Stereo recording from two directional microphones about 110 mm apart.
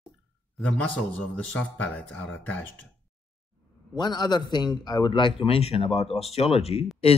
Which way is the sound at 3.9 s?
40° left (ahead or behind).